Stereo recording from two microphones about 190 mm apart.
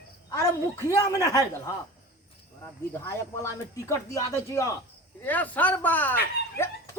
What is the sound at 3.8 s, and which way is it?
Speech, 15° left (ahead or behind).